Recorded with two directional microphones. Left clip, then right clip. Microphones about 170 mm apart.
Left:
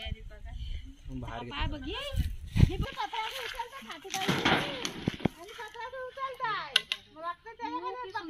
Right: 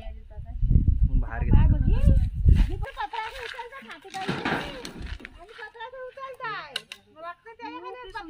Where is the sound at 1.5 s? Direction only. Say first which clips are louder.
Right 6 dB; 45° right (ahead or behind).